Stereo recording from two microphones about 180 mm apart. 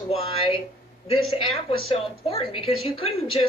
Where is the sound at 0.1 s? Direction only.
30° left (ahead or behind).